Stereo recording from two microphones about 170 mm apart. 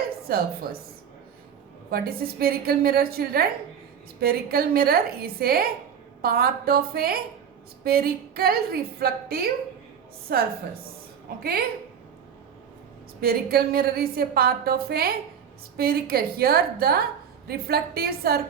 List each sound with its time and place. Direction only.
0.3 s a woman's voice: 60° right (ahead or behind)
1.9 s a woman's voice: 65° right (ahead or behind)
13.2 s a woman's voice: 65° right (ahead or behind)